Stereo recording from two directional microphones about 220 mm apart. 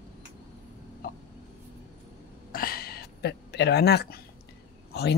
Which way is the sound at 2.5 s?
40° left (ahead or behind).